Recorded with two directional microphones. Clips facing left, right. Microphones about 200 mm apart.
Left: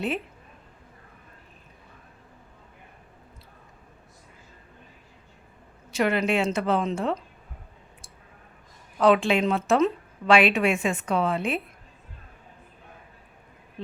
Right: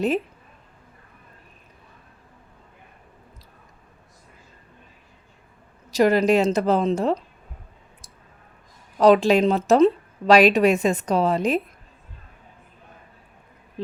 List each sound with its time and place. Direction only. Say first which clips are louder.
5.9 s speech: right 6 dB; 35° right (ahead or behind)
9.0 s speech: right 5 dB; 40° right (ahead or behind)